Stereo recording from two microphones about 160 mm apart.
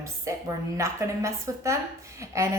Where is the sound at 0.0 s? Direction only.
20° right (ahead or behind).